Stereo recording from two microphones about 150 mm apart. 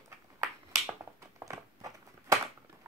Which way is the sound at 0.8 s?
20° right (ahead or behind).